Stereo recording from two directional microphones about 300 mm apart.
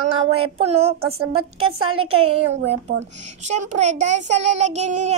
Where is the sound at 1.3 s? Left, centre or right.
Right.